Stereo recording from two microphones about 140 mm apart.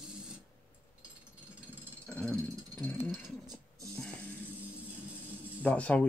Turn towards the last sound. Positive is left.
turn(degrees=10)  # may be behind; listen again after turning